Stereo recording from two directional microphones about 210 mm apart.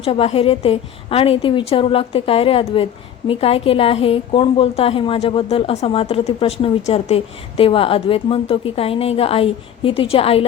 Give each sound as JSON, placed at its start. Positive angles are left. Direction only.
{"t": 0.0, "sound": "a woman's voice", "side_deg": 30}